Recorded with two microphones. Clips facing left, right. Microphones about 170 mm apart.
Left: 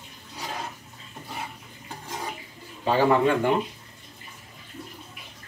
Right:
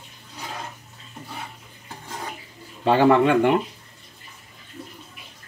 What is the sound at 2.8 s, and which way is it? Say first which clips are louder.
Speech: right 4 dB; 75° right (ahead or behind).